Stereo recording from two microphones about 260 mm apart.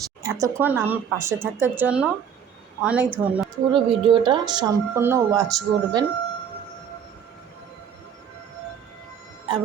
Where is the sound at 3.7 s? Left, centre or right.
Centre.